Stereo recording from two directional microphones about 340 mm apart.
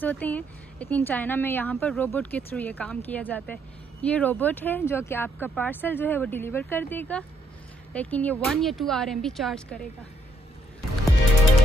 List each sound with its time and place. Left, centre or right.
0.0 s speech: centre